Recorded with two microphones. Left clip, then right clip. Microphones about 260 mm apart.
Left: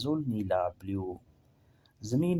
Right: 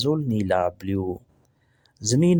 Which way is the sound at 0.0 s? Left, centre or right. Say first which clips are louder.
Right 8 dB; right.